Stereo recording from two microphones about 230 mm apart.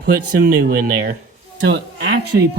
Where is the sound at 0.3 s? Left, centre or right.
Right.